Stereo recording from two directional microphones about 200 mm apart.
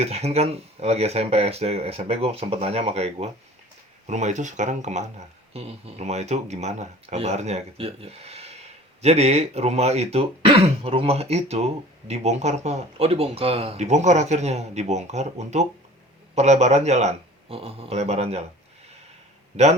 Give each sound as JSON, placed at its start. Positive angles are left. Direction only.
{"t": 0.0, "sound": "speech", "side_deg": -30}